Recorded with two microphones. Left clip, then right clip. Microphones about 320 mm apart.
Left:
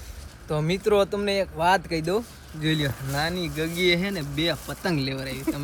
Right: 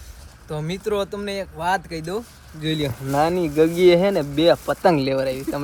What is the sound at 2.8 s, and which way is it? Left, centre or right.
Speech, centre.